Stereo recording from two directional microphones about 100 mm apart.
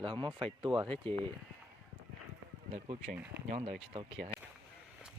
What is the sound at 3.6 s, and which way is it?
Speech, 80° right.